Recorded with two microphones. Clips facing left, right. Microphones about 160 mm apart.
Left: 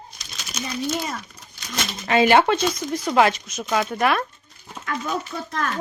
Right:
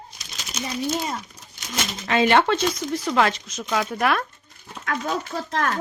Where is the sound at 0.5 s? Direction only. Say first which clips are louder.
Even; 25° right (ahead or behind).